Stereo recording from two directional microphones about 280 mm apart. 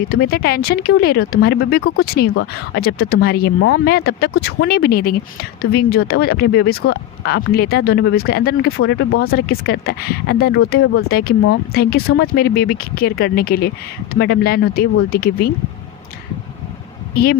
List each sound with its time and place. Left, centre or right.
0.1 s speech: left
8.8 s speech: left
9.3 s speech: left